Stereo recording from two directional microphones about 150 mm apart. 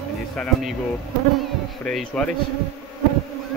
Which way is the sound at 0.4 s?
Centre (ahead or behind).